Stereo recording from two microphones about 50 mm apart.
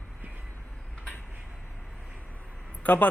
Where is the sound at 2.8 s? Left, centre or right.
Left.